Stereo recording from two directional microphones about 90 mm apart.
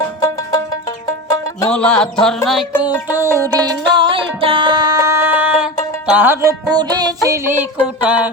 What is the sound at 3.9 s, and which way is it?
Music, 70° right (ahead or behind).